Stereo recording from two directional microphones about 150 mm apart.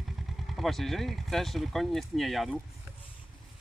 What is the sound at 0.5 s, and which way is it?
Speech, centre (ahead or behind).